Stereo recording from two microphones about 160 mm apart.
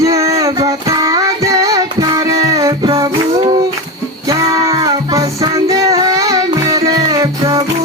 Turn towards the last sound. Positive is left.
turn(degrees=-20)  # may be behind; listen again after turning